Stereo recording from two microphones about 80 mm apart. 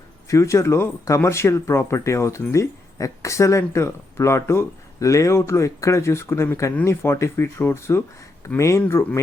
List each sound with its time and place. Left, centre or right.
0.3 s speech: left